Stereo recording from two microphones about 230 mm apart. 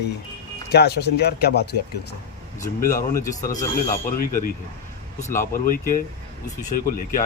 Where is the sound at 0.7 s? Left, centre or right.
Left.